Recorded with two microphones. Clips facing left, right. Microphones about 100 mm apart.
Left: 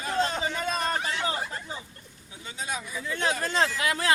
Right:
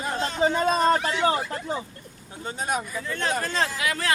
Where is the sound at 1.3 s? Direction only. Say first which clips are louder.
Right 7 dB; 65° right (ahead or behind).